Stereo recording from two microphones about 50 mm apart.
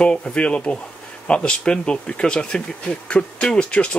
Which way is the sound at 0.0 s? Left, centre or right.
Left.